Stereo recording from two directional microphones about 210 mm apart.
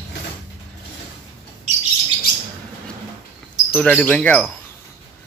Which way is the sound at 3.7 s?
5° left (ahead or behind).